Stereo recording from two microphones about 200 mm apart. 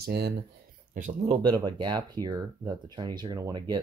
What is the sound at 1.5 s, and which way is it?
Speech, 20° right (ahead or behind).